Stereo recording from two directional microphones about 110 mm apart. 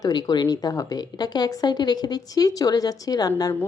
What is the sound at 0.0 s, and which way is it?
Speech, 40° left (ahead or behind).